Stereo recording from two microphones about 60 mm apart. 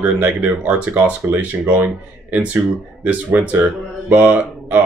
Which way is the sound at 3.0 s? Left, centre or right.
Right.